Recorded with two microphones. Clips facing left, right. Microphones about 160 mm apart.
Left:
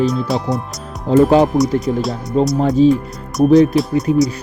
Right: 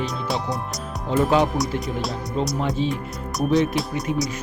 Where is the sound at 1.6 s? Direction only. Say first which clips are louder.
Left 9 dB; centre (ahead or behind).